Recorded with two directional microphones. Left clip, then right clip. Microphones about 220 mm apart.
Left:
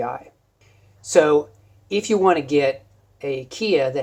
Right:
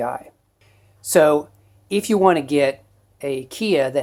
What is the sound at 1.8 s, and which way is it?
Speech, 40° right (ahead or behind).